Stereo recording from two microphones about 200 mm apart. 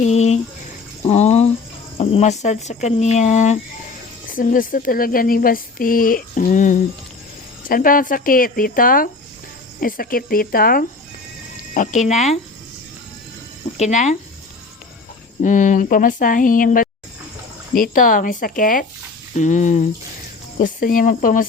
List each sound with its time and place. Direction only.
0.0 s speech: 35° left (ahead or behind)
1.0 s a sound: 35° left (ahead or behind)
2.0 s speech: 30° left (ahead or behind)
13.7 s speech: 35° left (ahead or behind)
15.4 s speech: 40° left (ahead or behind)